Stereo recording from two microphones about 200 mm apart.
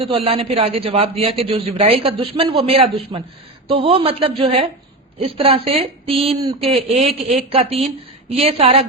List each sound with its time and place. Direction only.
0.0 s a man's voice: 30° right (ahead or behind)